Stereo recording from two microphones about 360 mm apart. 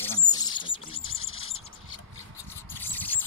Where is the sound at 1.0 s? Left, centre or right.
Left.